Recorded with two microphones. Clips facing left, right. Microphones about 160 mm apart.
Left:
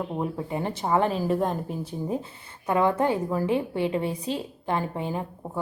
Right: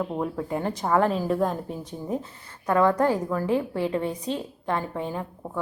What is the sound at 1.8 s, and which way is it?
Speech, 30° left (ahead or behind).